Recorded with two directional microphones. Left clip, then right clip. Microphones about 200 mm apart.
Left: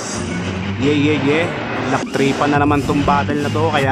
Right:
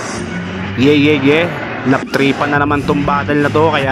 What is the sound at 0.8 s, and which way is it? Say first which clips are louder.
Speech: right 6 dB; 30° right (ahead or behind).